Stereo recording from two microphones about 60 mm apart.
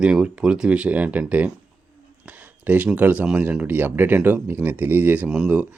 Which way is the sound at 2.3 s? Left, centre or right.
Right.